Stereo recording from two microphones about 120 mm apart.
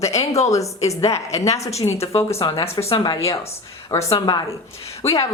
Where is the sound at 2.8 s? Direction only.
40° left (ahead or behind).